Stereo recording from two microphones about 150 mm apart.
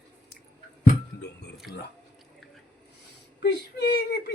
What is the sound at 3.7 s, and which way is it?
Speech, 90° left.